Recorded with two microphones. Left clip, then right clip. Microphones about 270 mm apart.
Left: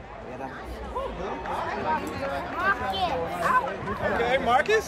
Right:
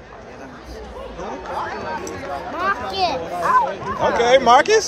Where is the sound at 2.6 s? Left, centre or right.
Right.